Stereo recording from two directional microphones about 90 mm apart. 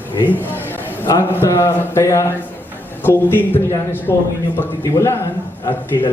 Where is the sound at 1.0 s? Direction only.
30° left (ahead or behind).